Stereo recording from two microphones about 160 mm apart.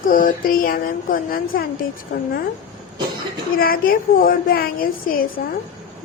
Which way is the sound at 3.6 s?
65° left (ahead or behind).